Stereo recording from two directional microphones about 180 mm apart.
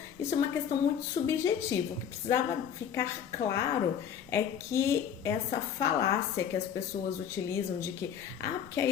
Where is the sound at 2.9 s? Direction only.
15° left (ahead or behind).